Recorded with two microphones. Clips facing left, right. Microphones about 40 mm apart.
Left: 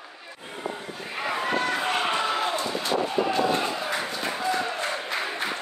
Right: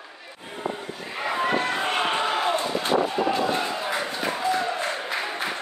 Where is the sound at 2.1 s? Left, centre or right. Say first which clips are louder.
Right 2 dB; centre.